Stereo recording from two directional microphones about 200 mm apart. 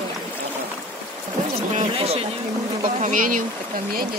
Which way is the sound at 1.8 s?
30° right (ahead or behind).